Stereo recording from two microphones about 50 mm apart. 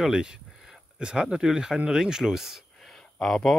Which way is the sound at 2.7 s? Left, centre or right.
Centre.